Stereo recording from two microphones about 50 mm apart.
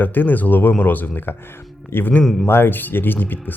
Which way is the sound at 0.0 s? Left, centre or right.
Left.